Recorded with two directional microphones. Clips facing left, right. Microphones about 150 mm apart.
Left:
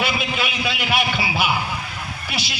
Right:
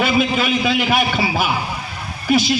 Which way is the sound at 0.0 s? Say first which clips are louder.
Right 7 dB; 45° right (ahead or behind).